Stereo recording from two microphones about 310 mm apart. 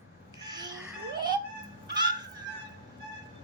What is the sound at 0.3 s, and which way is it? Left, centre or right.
Babbling, centre.